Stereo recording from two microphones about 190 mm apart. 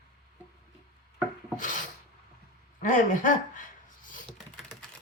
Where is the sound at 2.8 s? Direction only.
45° left (ahead or behind).